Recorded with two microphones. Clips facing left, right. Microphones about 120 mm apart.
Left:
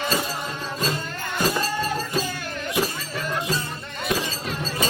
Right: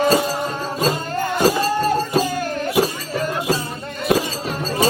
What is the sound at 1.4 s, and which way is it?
Music, 40° right (ahead or behind).